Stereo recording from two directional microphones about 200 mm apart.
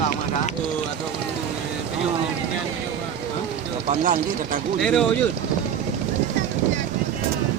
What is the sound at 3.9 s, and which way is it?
Speech, 40° right (ahead or behind).